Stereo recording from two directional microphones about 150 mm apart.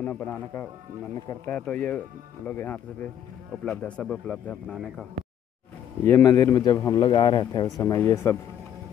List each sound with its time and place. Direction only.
0.0 s speech: 10° left (ahead or behind)
6.0 s a man's voice: 15° left (ahead or behind)